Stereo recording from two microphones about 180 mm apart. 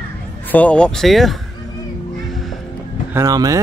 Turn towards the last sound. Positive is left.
turn(degrees=-20)  # may be behind; listen again after turning